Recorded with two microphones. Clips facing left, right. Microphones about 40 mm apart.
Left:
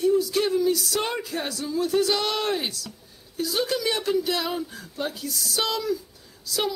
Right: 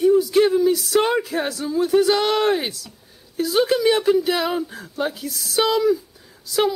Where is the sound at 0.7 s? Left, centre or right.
Centre.